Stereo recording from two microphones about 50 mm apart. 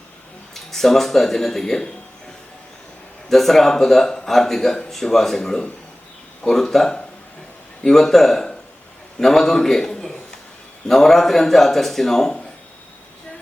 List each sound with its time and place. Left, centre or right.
0.5 s speech: centre
3.2 s a man's voice: centre